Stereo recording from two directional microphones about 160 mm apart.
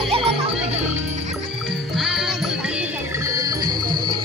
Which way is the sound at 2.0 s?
Centre (ahead or behind).